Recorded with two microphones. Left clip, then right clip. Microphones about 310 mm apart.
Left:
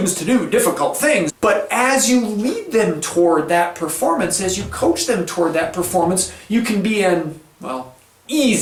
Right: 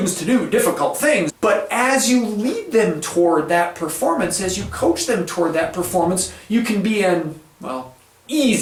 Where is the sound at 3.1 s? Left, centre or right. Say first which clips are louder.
Left 2 dB; centre.